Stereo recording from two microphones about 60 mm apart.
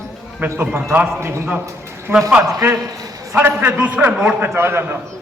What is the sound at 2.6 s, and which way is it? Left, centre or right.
Speech, right.